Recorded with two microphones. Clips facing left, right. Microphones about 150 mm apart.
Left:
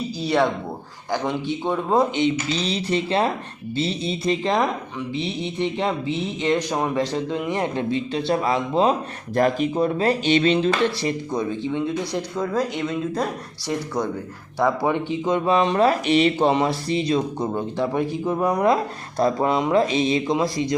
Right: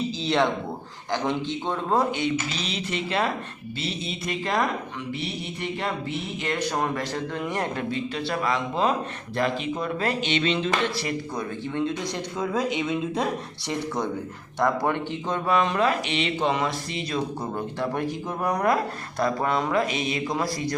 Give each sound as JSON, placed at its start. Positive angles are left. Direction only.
{"t": 0.2, "sound": "speech", "side_deg": 10}
{"t": 7.9, "sound": "speech", "side_deg": 30}
{"t": 9.3, "sound": "speech", "side_deg": 45}
{"t": 11.0, "sound": "speech", "side_deg": 15}
{"t": 12.4, "sound": "speech", "side_deg": 0}
{"t": 14.8, "sound": "speech", "side_deg": 15}
{"t": 15.5, "sound": "speech", "side_deg": 30}
{"t": 17.1, "sound": "speech", "side_deg": 20}
{"t": 17.9, "sound": "speech", "side_deg": 5}
{"t": 19.2, "sound": "speech", "side_deg": 25}